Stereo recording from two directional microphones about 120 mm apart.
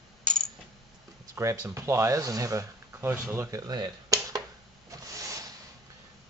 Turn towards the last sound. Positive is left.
turn(degrees=-30)  # may be behind; listen again after turning